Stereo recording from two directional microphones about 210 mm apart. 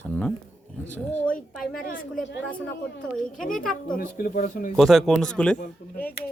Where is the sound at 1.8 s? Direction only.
40° left (ahead or behind).